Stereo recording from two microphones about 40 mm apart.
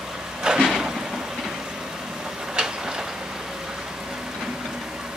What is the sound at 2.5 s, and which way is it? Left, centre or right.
Tick-tock, centre.